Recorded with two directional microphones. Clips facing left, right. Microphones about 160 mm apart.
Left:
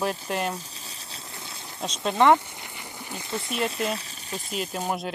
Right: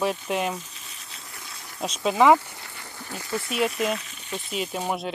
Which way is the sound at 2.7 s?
20° left (ahead or behind).